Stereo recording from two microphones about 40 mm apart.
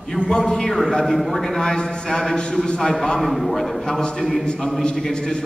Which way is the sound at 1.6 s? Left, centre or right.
Centre.